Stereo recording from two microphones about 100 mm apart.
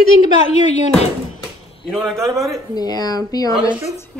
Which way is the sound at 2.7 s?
40° left (ahead or behind).